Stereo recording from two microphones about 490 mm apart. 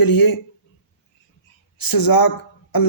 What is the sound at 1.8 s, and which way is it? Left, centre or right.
Speech, left.